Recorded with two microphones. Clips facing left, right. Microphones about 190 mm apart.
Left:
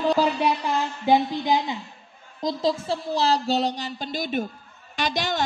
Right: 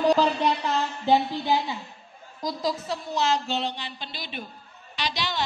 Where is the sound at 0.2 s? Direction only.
10° left (ahead or behind).